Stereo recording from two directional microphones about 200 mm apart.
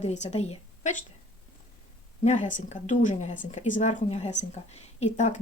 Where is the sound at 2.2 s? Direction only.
35° left (ahead or behind).